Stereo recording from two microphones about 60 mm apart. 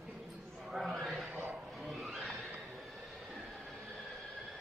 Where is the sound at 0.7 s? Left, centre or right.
Centre.